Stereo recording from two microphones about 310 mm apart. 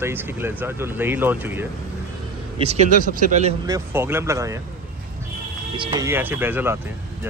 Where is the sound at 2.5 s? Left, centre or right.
Centre.